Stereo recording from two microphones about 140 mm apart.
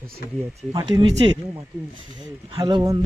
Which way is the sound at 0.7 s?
30° right (ahead or behind).